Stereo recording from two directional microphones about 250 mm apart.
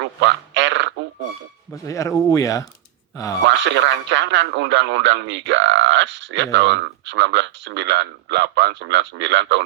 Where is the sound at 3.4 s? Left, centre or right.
Right.